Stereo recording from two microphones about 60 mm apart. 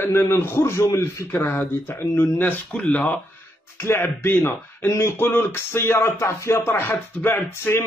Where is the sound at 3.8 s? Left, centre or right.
Left.